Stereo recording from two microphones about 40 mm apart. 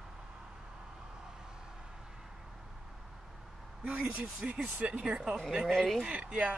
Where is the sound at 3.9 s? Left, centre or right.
Right.